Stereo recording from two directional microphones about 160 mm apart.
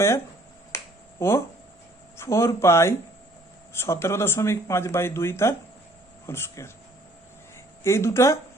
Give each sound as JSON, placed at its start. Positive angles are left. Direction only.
{"t": 0.7, "sound": "finger snapping", "side_deg": 15}
{"t": 1.2, "sound": "speech", "side_deg": 15}
{"t": 7.9, "sound": "speech", "side_deg": 15}